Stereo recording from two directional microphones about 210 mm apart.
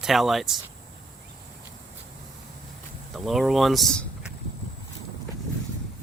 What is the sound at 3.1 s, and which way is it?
Speech, centre (ahead or behind).